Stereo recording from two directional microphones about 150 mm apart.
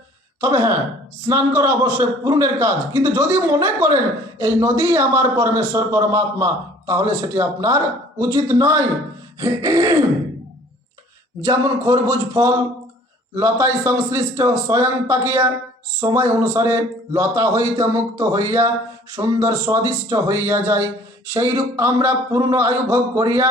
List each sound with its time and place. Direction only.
0.4 s a man's voice: 20° right (ahead or behind)
11.4 s a man's voice: 25° right (ahead or behind)